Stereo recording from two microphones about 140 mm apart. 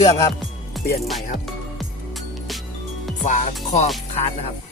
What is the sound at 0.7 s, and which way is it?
Music, centre (ahead or behind).